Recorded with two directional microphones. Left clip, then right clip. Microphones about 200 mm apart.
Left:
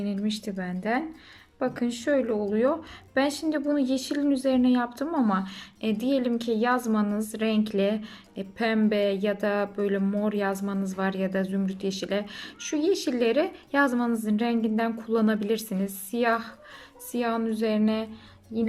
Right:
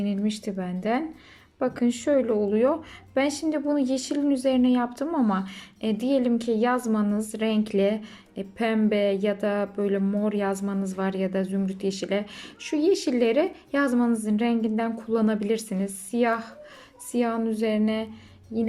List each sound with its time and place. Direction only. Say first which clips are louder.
0.0 s speech: right 2 dB; 5° right (ahead or behind)